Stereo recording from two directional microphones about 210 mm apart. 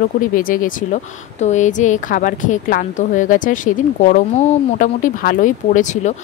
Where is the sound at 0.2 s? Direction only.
40° left (ahead or behind).